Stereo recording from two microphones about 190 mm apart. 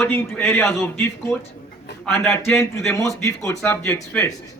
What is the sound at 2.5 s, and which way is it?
Speech, 15° left (ahead or behind).